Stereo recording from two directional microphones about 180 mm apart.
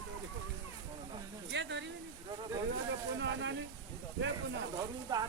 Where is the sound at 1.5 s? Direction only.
80° right.